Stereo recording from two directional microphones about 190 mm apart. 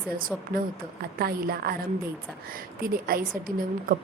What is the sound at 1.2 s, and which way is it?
A woman's voice, 55° right (ahead or behind).